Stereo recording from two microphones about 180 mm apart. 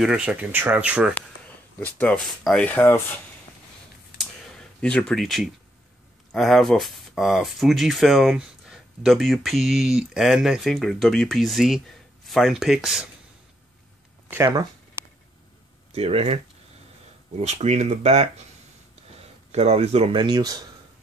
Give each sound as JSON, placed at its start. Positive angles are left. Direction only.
{"t": 0.0, "sound": "speech", "side_deg": -5}
{"t": 1.8, "sound": "speech", "side_deg": 10}
{"t": 4.8, "sound": "speech", "side_deg": 5}
{"t": 14.3, "sound": "speech", "side_deg": -20}
{"t": 15.9, "sound": "speech", "side_deg": -35}
{"t": 17.4, "sound": "speech", "side_deg": -40}
{"t": 19.5, "sound": "speech", "side_deg": -35}